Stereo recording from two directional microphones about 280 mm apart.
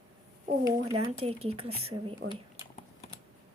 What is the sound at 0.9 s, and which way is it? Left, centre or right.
Speech, right.